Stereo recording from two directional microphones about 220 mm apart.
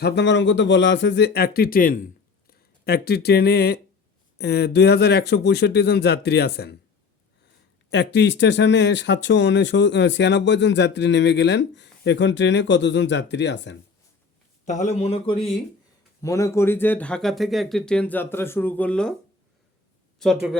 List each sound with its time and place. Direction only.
0.0 s speech: 55° left (ahead or behind)
7.9 s speech: 50° left (ahead or behind)
14.6 s a man's voice: 35° left (ahead or behind)
15.4 s speech: centre (ahead or behind)
16.2 s speech: 15° left (ahead or behind)
20.1 s speech: centre (ahead or behind)